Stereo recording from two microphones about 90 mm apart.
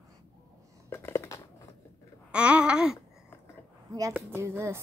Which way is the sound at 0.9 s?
25° left (ahead or behind).